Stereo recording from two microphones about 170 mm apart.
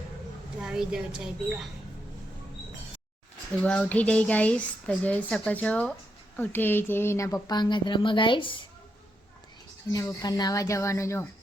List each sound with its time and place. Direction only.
0.6 s a woman's voice: 5° right (ahead or behind)
3.6 s speech: 5° left (ahead or behind); by 8.6 s 30° left (ahead or behind)
10.2 s speech: 20° left (ahead or behind)